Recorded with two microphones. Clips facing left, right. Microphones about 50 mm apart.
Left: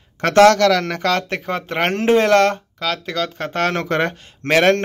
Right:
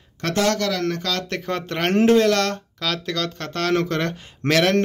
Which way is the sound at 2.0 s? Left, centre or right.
Left.